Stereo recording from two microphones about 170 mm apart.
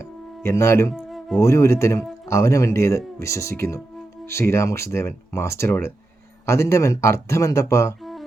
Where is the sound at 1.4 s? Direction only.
15° left (ahead or behind).